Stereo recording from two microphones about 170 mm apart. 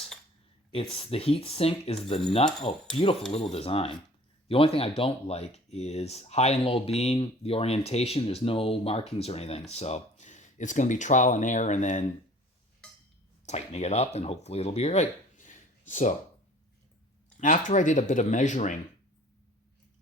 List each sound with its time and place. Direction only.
0.7 s speech: 35° left (ahead or behind)
13.4 s speech: 40° left (ahead or behind)
17.4 s speech: 45° left (ahead or behind)